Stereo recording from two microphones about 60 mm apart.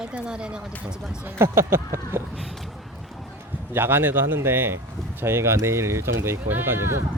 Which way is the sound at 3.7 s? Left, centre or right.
Right.